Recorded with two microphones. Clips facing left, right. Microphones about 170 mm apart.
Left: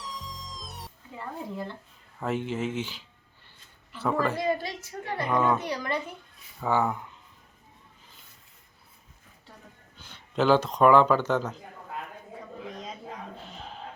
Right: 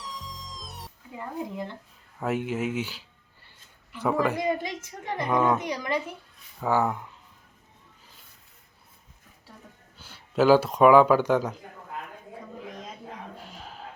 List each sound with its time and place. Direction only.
0.0 s music: centre (ahead or behind)
1.1 s a woman's voice: 15° right (ahead or behind)
6.6 s speech: 5° right (ahead or behind)
10.0 s speech: 5° right (ahead or behind)